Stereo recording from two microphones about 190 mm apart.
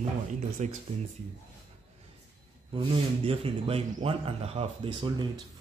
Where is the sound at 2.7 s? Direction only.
30° right (ahead or behind).